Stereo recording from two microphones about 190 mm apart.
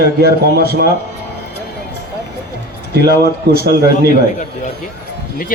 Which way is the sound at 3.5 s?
55° right (ahead or behind).